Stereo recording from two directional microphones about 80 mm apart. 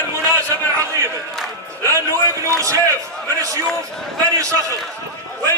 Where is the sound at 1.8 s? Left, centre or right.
Right.